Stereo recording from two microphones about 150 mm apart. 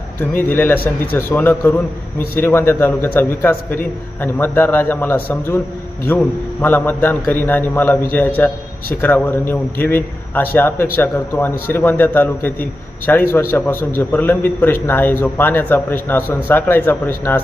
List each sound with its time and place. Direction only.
0.2 s a man's voice: 15° left (ahead or behind)
6.6 s a man's voice: 10° left (ahead or behind)